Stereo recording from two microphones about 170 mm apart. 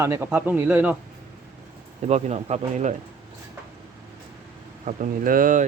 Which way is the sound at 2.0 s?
40° right (ahead or behind).